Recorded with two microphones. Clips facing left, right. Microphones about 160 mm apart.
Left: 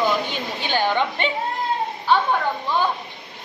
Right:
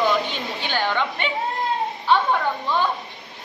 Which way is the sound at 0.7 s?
15° left (ahead or behind).